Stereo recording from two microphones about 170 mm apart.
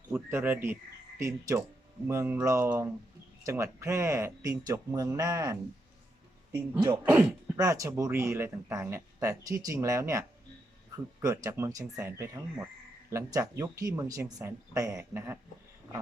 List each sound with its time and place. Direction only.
0.1 s speech: 10° right (ahead or behind)